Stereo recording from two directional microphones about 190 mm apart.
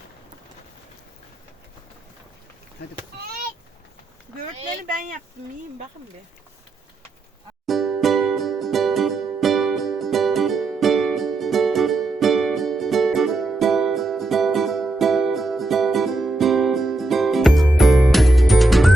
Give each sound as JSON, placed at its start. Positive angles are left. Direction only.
{"t": 4.8, "sound": "speech", "side_deg": -45}
{"t": 7.7, "sound": "music", "side_deg": 0}